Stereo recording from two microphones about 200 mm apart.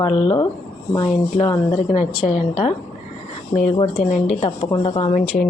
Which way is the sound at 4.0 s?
Centre (ahead or behind).